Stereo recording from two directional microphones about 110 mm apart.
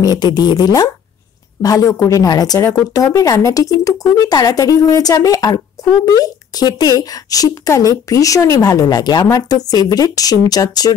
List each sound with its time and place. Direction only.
0.0 s speech: 40° left (ahead or behind)